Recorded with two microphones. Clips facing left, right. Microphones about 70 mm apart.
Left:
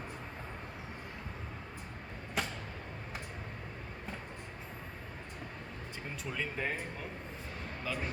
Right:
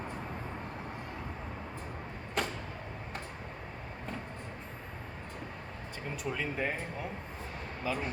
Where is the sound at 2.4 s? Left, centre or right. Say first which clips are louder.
Right 3 dB; centre.